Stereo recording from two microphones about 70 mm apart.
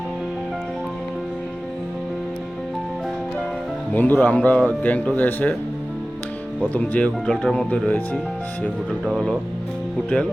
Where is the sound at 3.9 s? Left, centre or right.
Left.